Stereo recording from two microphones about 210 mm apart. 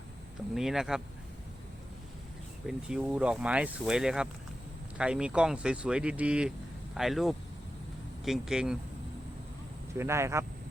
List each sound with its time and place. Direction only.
0.3 s speech: centre (ahead or behind)
2.6 s speech: 5° right (ahead or behind)
10.0 s speech: 15° right (ahead or behind)